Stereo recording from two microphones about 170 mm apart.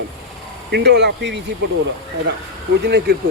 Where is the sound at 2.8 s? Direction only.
70° right (ahead or behind).